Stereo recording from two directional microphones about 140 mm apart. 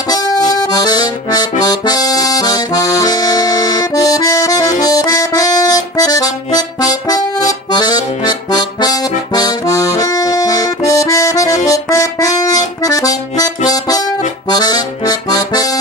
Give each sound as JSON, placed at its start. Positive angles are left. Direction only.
{"t": 0.1, "sound": "accordion", "side_deg": 25}
{"t": 13.7, "sound": "music", "side_deg": 25}